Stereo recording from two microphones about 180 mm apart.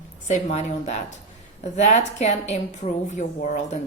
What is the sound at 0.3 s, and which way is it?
A woman's voice, 40° left (ahead or behind).